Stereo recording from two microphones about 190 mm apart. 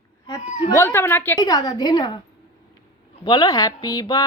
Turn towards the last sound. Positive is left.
turn(degrees=20)  # may be behind; listen again after turning